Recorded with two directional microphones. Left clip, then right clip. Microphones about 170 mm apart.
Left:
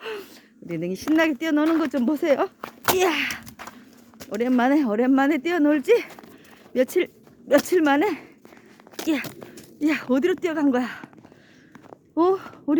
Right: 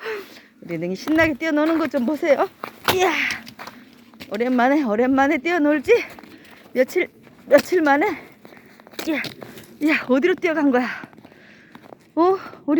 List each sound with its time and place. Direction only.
0.0 s a sound: 20° left (ahead or behind)
0.7 s speech: 15° left (ahead or behind)
2.0 s speech: 30° left (ahead or behind)
3.0 s a sound: 35° left (ahead or behind)
4.2 s speech: 20° left (ahead or behind)
6.7 s a sound: 30° left (ahead or behind)
7.7 s speech: 30° left (ahead or behind)
9.8 s speech: centre (ahead or behind)
12.1 s speech: 15° left (ahead or behind)